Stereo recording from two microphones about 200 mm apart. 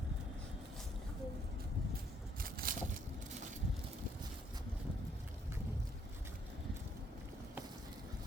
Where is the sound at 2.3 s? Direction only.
45° right (ahead or behind).